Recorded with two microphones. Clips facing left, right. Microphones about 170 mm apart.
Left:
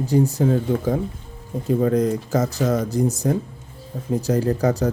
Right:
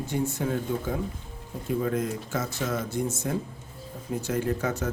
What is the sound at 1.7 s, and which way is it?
Speech, 40° left (ahead or behind).